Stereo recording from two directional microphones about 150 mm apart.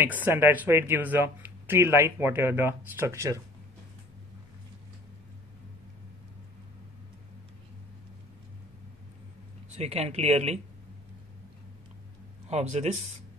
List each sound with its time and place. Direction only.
0.0 s speech: 15° right (ahead or behind)
9.8 s speech: 45° right (ahead or behind)
12.4 s speech: 50° right (ahead or behind)